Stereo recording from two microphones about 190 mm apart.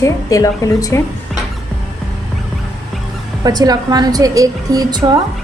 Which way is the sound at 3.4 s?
20° right (ahead or behind).